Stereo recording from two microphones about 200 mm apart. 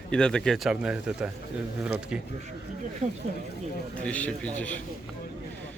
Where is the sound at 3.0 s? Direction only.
35° right (ahead or behind).